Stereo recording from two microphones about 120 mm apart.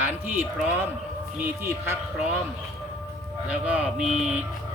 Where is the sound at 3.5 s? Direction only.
10° right (ahead or behind).